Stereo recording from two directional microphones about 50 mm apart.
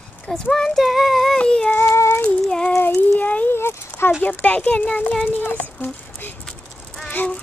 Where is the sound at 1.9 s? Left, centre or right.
Left.